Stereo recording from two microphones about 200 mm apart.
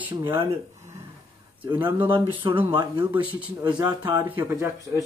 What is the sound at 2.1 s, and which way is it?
Speech, 25° right (ahead or behind).